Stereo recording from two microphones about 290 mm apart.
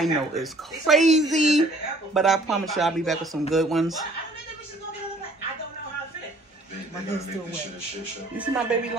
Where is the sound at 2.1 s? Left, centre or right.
Centre.